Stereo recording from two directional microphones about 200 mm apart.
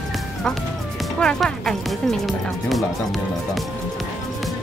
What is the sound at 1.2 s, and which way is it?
Speech, centre (ahead or behind).